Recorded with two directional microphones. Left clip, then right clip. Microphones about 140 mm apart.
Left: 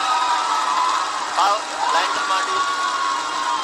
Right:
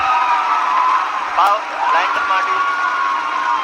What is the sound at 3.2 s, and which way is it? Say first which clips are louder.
Crowd: right 5 dB; 35° right (ahead or behind).